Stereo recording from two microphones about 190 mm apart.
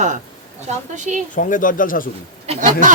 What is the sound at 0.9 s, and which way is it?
Speech, 40° right (ahead or behind).